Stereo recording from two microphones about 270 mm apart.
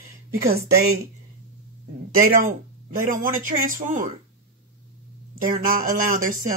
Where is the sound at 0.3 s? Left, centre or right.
Right.